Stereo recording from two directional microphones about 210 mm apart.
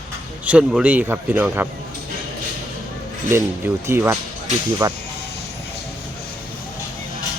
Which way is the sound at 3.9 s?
10° right (ahead or behind).